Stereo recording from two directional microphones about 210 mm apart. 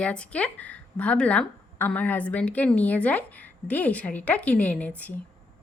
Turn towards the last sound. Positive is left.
turn(degrees=5)  # may be behind; listen again after turning